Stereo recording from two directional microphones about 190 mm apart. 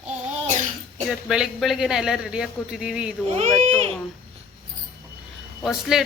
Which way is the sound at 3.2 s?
35° right (ahead or behind).